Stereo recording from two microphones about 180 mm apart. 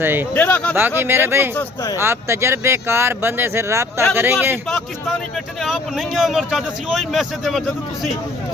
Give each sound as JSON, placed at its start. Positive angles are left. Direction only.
{"t": 0.0, "sound": "speech", "side_deg": -10}
{"t": 0.3, "sound": "speech", "side_deg": 10}
{"t": 0.8, "sound": "speech", "side_deg": -10}
{"t": 1.5, "sound": "speech", "side_deg": 15}
{"t": 2.0, "sound": "speech", "side_deg": -15}
{"t": 5.6, "sound": "a man's voice", "side_deg": 0}